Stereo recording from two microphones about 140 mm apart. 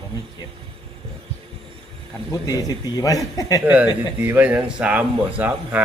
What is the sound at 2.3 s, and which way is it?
A man's voice, 25° left (ahead or behind).